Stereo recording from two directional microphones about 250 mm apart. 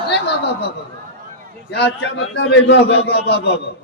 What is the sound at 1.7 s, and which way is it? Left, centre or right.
A man's voice, left.